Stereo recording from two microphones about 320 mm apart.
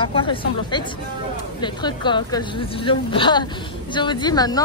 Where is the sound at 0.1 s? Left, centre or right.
Centre.